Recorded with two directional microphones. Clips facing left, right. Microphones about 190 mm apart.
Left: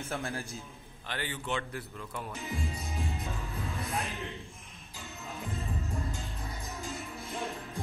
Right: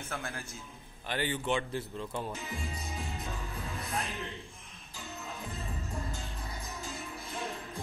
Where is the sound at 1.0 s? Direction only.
20° right (ahead or behind).